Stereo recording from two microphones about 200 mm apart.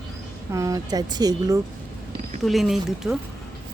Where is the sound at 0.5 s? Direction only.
15° right (ahead or behind).